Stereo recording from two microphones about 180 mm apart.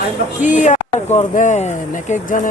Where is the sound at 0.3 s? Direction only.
45° left (ahead or behind).